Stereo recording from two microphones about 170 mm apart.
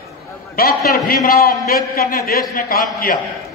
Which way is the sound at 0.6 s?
60° left (ahead or behind).